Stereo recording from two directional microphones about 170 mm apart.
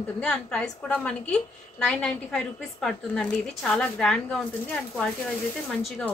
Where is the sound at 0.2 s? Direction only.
5° left (ahead or behind).